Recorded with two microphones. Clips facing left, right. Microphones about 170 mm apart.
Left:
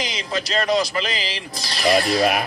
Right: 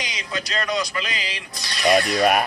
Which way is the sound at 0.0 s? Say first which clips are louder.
Left 4 dB; 30° left (ahead or behind).